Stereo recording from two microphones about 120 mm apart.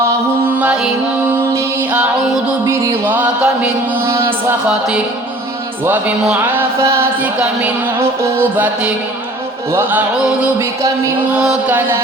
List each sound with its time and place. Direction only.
0.6 s music: 10° right (ahead or behind)
1.9 s music: 10° right (ahead or behind)
4.0 s music: 20° right (ahead or behind)
5.8 s music: 15° right (ahead or behind)
11.3 s music: 10° right (ahead or behind)